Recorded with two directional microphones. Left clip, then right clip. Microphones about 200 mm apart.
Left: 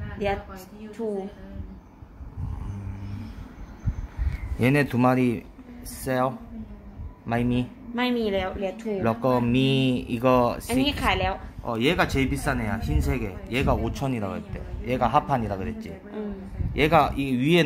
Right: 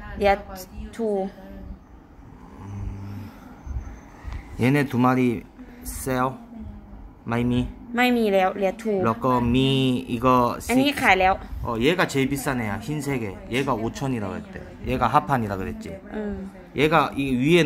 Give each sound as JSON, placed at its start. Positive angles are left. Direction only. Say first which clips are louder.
{"t": 4.6, "sound": "speech", "louder": "right 1 dB", "side_deg": 0}
{"t": 7.9, "sound": "a woman's voice", "louder": "right 5 dB", "side_deg": -45}
{"t": 9.0, "sound": "speech", "louder": "even", "side_deg": 0}
{"t": 10.7, "sound": "a woman's voice", "louder": "right 5 dB", "side_deg": -45}
{"t": 11.6, "sound": "speech", "louder": "right 1 dB", "side_deg": 0}
{"t": 16.7, "sound": "speech", "louder": "even", "side_deg": 0}